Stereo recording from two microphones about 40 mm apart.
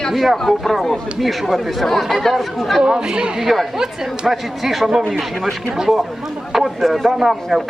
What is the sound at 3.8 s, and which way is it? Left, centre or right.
A woman's voice, centre.